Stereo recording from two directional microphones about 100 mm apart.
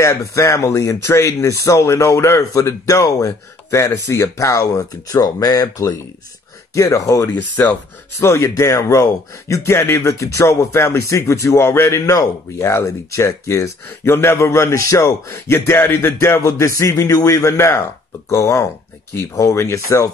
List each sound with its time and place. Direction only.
0.0 s speech: 30° left (ahead or behind)